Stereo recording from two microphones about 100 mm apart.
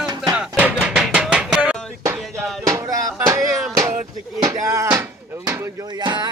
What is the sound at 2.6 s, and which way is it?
Music, 35° right (ahead or behind).